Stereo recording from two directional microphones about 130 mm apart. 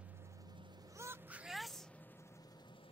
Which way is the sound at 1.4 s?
Centre (ahead or behind).